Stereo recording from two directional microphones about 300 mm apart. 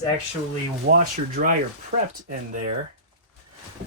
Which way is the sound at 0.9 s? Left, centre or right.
Right.